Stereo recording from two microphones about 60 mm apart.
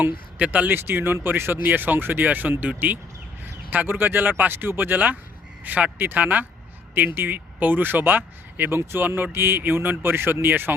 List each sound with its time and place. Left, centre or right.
0.0 s speech: right
0.7 s speech: right